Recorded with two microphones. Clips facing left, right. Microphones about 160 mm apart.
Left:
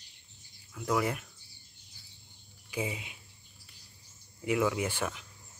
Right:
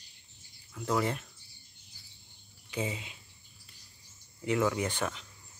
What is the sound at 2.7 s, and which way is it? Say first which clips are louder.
Speech: even; 10° left (ahead or behind).